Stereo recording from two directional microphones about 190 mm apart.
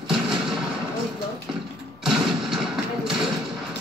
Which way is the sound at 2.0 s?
Centre (ahead or behind).